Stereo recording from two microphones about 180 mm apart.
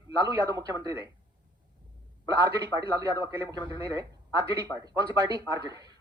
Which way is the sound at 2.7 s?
20° right (ahead or behind).